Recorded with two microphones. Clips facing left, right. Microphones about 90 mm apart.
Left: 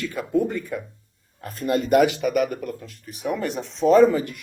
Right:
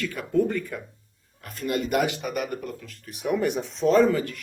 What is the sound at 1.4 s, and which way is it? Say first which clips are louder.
Speech: left 4 dB; 35° left (ahead or behind).